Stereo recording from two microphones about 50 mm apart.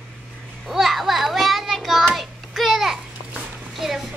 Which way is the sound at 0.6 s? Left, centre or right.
Centre.